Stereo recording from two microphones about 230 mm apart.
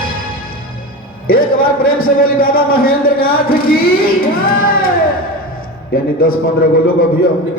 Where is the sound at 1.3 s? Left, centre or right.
Left.